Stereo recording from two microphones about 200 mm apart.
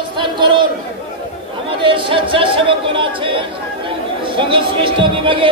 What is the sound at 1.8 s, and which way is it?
Speech, 25° right (ahead or behind).